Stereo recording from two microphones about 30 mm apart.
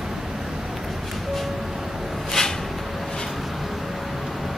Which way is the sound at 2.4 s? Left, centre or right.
Left.